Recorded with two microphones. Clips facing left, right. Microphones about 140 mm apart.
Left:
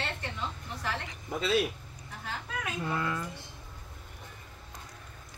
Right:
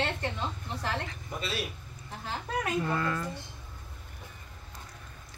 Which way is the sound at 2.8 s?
10° left (ahead or behind).